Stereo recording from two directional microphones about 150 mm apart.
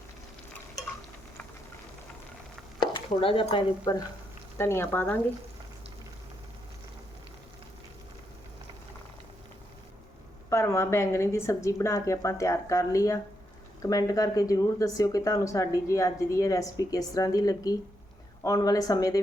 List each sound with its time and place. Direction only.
3.1 s speech: 35° left (ahead or behind)
3.9 s speech: 25° left (ahead or behind)
10.5 s speech: 20° left (ahead or behind)